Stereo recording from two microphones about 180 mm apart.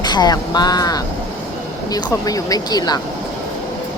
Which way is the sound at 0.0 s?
25° left (ahead or behind).